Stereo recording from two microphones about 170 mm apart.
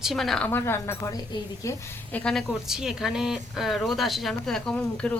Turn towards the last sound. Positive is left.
turn(degrees=5)  # may be behind; listen again after turning